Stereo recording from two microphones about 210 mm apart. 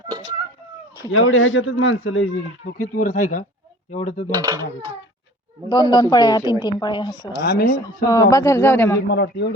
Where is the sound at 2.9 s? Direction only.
40° left (ahead or behind).